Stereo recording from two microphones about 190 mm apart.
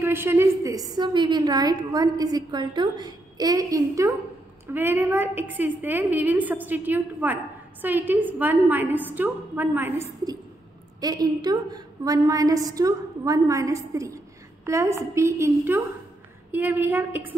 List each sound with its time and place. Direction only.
0.0 s a woman's voice: 10° right (ahead or behind)